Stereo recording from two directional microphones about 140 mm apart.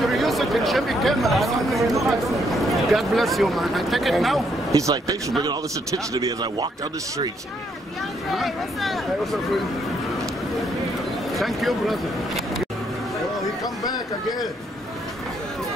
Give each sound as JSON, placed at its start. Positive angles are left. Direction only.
{"t": 0.1, "sound": "speech", "side_deg": 0}
{"t": 4.7, "sound": "speech", "side_deg": -25}
{"t": 6.1, "sound": "speech", "side_deg": -30}
{"t": 8.3, "sound": "speech", "side_deg": 0}
{"t": 11.3, "sound": "speech", "side_deg": 0}